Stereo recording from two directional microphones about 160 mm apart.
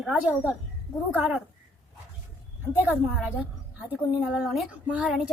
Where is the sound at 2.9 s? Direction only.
5° right (ahead or behind).